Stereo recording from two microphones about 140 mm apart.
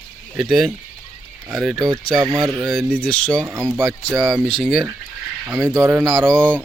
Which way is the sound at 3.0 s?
5° left (ahead or behind).